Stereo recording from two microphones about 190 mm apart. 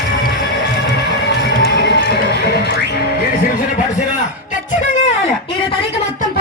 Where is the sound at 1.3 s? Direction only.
60° left (ahead or behind).